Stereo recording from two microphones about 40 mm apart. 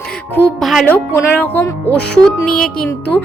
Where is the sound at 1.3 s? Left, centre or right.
Left.